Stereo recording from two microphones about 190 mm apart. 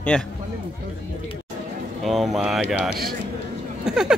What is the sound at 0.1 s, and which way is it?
Speech, 5° left (ahead or behind).